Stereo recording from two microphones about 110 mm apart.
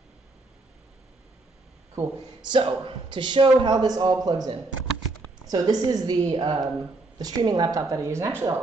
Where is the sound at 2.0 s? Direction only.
40° right (ahead or behind).